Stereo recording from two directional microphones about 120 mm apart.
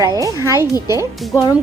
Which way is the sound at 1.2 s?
Centre (ahead or behind).